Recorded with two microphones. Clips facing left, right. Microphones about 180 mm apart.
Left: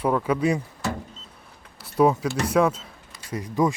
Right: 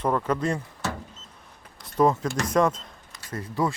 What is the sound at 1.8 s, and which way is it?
Speech, 10° left (ahead or behind).